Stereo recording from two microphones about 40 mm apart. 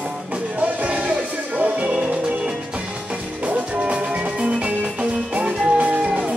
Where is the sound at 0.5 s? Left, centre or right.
Right.